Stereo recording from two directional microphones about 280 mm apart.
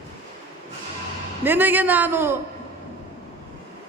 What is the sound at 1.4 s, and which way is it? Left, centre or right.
Speech, centre.